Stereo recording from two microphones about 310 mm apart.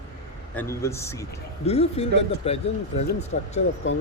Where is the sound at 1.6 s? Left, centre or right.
Centre.